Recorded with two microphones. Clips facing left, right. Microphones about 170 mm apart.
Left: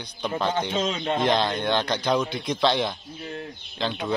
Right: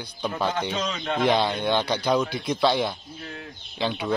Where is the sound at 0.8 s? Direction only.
25° left (ahead or behind).